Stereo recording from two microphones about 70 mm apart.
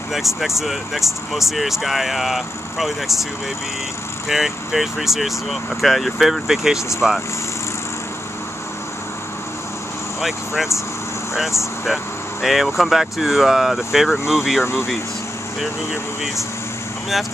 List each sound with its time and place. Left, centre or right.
0.1 s speech: centre
4.3 s speech: centre
10.2 s speech: centre
11.8 s speech: centre
14.6 s speech: left